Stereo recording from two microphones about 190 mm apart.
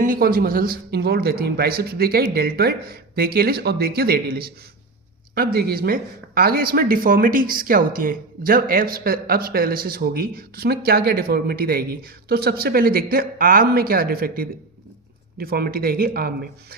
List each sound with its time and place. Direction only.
0.0 s speech: 50° right (ahead or behind)